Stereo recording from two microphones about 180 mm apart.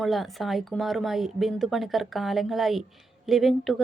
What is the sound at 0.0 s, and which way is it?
Speech, centre (ahead or behind).